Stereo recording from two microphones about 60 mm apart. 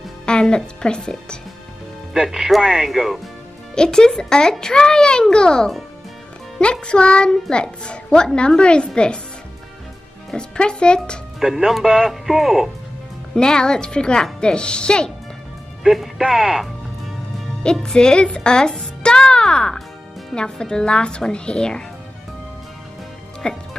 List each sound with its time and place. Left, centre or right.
0.2 s speech: centre
2.1 s speech: centre
3.7 s a child's voice: centre
10.3 s a child's voice: centre
11.3 s speech: centre
13.3 s a child's voice: centre
15.8 s speech: centre
17.8 s a child's voice: centre
23.4 s a child's voice: centre